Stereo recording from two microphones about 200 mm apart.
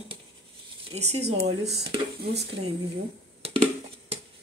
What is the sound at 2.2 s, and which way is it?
Speech, 55° right (ahead or behind).